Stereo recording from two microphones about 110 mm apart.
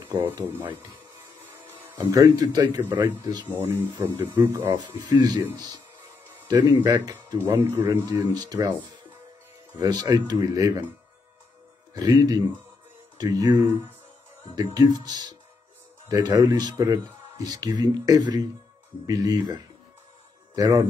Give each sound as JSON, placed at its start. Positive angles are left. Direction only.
{"t": 1.4, "sound": "music", "side_deg": -15}
{"t": 2.0, "sound": "speech", "side_deg": -35}
{"t": 2.8, "sound": "speech", "side_deg": -20}
{"t": 4.7, "sound": "speech", "side_deg": -40}
{"t": 6.4, "sound": "speech", "side_deg": -40}
{"t": 7.3, "sound": "speech", "side_deg": -20}
{"t": 8.0, "sound": "speech", "side_deg": -35}
{"t": 9.8, "sound": "speech", "side_deg": -40}
{"t": 11.9, "sound": "speech", "side_deg": -35}